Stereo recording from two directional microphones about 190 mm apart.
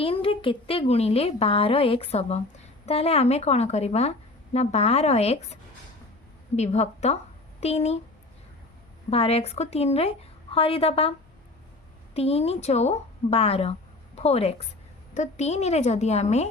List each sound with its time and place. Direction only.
0.0 s a woman's voice: 30° left (ahead or behind)
6.6 s a woman's voice: 35° left (ahead or behind)
9.0 s a woman's voice: 30° left (ahead or behind)
12.1 s a woman's voice: 30° left (ahead or behind)